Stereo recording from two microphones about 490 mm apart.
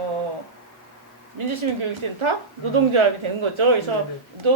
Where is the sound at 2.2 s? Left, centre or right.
Right.